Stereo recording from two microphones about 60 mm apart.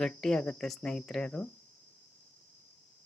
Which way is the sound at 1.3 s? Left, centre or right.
Left.